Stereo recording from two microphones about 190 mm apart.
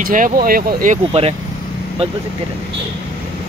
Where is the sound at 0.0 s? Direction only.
45° right (ahead or behind).